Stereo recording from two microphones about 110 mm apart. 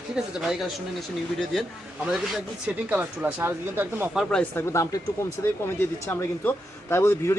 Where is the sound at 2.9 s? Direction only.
15° right (ahead or behind).